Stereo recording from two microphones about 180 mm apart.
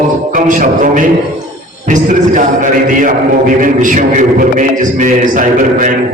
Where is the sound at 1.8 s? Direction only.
45° right (ahead or behind).